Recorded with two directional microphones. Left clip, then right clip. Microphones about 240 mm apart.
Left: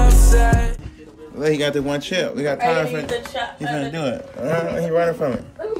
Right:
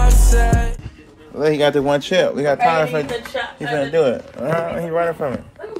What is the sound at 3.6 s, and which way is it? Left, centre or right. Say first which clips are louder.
Speech: right 10 dB; right.